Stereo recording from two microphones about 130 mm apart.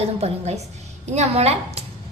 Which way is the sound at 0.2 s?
55° right (ahead or behind).